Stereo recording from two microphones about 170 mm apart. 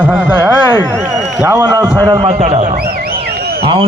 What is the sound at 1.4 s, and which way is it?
Speech, 20° right (ahead or behind).